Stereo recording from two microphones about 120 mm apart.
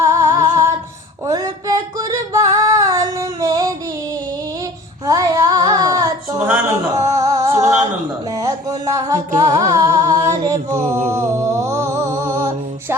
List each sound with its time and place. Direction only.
0.0 s music: 25° right (ahead or behind)
1.2 s singing: 30° right (ahead or behind)
5.0 s child singing: 30° right (ahead or behind)
6.5 s a sound: 25° right (ahead or behind)
9.6 s music: 25° right (ahead or behind)
10.3 s music: 85° right
11.3 s music: 25° right (ahead or behind)